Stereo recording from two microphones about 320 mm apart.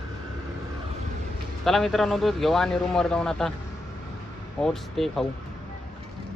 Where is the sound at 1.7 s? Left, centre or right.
Centre.